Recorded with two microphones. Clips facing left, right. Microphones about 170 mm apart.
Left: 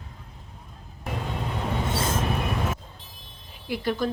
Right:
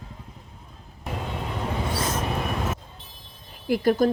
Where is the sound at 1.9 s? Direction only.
25° left (ahead or behind).